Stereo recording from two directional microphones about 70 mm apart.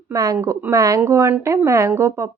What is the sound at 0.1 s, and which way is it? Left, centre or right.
Speech, right.